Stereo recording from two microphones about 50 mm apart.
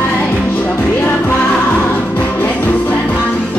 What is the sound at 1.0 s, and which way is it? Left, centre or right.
Music, left.